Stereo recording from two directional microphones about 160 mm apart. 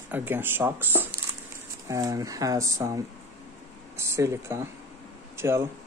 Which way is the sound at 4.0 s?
15° right (ahead or behind).